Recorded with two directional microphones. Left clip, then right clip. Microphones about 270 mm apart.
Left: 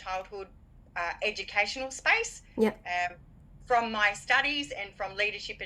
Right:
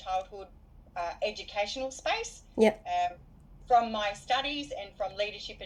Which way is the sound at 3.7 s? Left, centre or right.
Left.